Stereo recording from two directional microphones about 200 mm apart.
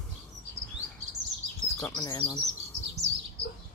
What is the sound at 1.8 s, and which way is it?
Speech, 15° left (ahead or behind).